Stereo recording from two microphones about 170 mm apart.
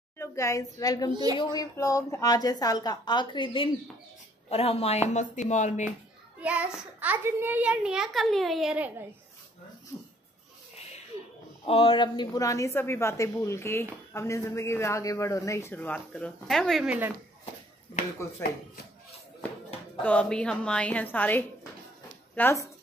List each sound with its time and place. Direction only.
0.2 s a woman's voice: 20° left (ahead or behind)
1.1 s a woman's voice: 20° right (ahead or behind)
1.4 s a woman's voice: 25° left (ahead or behind); by 5.9 s 45° left (ahead or behind)
6.4 s a child's voice: 10° right (ahead or behind)
11.6 s speech: 35° left (ahead or behind); by 17.1 s 5° right (ahead or behind)
18.4 s speech: 15° left (ahead or behind)
20.0 s speech: 10° left (ahead or behind)